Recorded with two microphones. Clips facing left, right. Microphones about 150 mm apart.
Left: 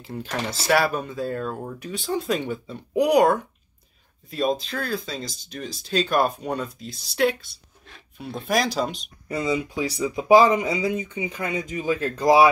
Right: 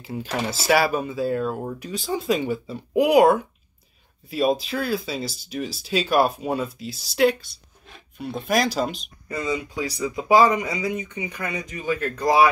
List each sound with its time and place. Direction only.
0.0 s speech: 5° right (ahead or behind)
9.3 s speech: 25° left (ahead or behind)